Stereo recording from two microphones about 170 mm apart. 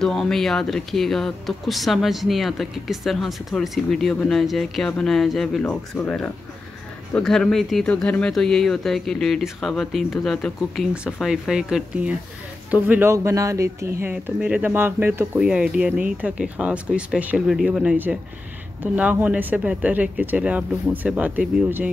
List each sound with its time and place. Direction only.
0.0 s speech: 5° left (ahead or behind); by 13.9 s 15° right (ahead or behind)
14.0 s speech: 5° right (ahead or behind)